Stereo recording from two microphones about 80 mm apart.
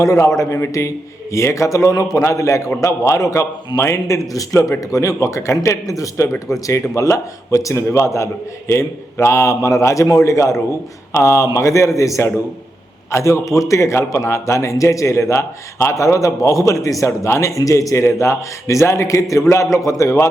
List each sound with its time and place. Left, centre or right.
0.0 s a man's voice: left